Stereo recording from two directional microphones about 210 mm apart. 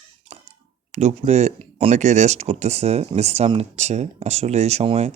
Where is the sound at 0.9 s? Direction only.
30° right (ahead or behind).